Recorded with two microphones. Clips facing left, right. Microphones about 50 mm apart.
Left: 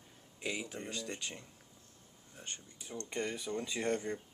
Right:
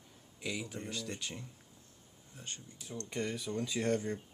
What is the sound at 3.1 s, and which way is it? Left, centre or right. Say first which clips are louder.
Speech: even; centre.